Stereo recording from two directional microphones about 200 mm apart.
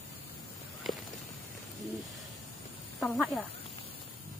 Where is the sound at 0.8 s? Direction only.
Centre (ahead or behind).